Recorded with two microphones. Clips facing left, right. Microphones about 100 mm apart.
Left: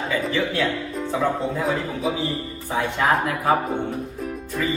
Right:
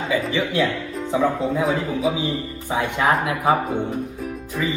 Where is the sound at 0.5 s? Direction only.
Centre (ahead or behind).